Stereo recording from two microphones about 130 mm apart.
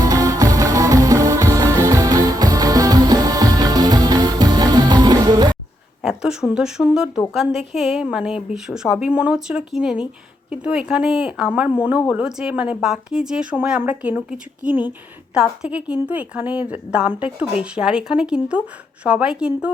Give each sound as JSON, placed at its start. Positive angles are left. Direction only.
{"t": 0.0, "sound": "music", "side_deg": -25}
{"t": 6.0, "sound": "a woman's voice", "side_deg": -5}